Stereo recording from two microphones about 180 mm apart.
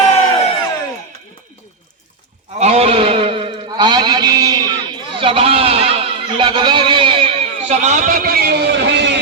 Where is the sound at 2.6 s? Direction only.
35° right (ahead or behind); by 4.6 s 20° right (ahead or behind).